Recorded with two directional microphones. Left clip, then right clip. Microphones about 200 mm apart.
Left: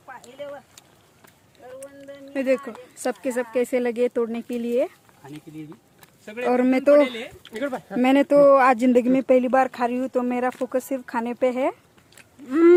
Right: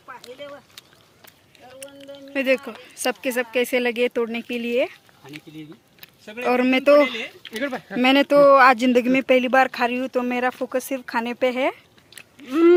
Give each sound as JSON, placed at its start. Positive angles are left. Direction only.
{"t": 0.1, "sound": "a sound", "side_deg": 40}
{"t": 1.8, "sound": "speech", "side_deg": 0}
{"t": 6.4, "sound": "speech", "side_deg": 10}
{"t": 7.4, "sound": "speech", "side_deg": -30}
{"t": 8.0, "sound": "speech", "side_deg": 10}